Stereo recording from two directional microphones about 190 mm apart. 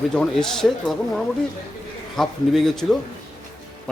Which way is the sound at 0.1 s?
5° left (ahead or behind).